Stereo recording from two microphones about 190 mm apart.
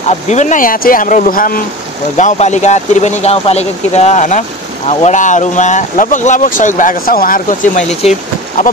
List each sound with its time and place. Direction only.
0.3 s speech: 40° left (ahead or behind)
8.0 s speech: 30° left (ahead or behind)